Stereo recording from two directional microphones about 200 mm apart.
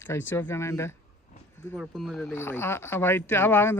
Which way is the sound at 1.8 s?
Centre (ahead or behind).